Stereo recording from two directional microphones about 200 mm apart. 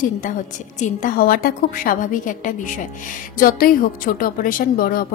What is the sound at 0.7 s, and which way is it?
A woman's voice, 40° left (ahead or behind).